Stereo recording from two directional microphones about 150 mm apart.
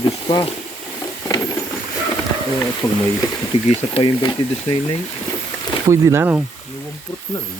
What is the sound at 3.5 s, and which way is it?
Speech, 45° left (ahead or behind).